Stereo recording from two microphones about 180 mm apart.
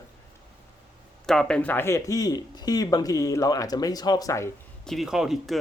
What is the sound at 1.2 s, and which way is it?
Speech, 5° left (ahead or behind).